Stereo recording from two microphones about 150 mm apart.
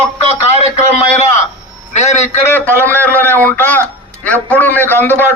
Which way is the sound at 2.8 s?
10° left (ahead or behind).